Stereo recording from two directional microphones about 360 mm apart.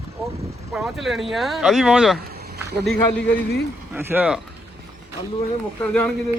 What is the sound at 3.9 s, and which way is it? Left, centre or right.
Speech, centre.